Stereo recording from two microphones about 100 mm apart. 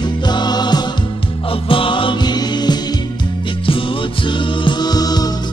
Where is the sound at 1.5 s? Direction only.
60° left (ahead or behind); by 2.8 s 45° left (ahead or behind).